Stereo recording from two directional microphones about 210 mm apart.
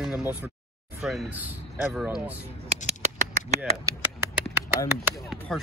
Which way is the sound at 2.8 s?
30° right (ahead or behind).